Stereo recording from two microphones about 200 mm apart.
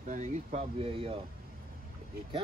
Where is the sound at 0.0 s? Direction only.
35° right (ahead or behind).